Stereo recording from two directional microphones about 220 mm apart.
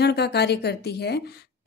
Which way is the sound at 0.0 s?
50° left (ahead or behind).